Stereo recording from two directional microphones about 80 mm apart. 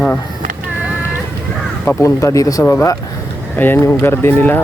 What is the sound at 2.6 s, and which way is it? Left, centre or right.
Speech, left.